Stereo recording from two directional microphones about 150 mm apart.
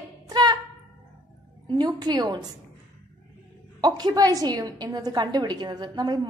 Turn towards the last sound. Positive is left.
turn(degrees=-25)  # may be behind; listen again after turning